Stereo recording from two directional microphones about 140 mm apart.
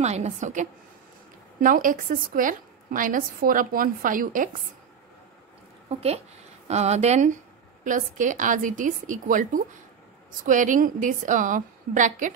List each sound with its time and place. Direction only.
0.0 s a woman's voice: 55° right (ahead or behind)
1.6 s a woman's voice: 75° right (ahead or behind)
5.9 s speech: 45° right (ahead or behind)
7.8 s a woman's voice: 65° right (ahead or behind)